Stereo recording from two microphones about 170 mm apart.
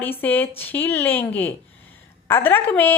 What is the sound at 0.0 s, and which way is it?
Speech, 10° left (ahead or behind).